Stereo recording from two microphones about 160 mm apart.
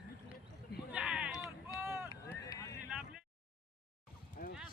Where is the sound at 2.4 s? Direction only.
20° left (ahead or behind).